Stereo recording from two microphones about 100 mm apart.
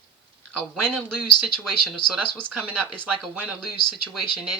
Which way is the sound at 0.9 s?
5° left (ahead or behind).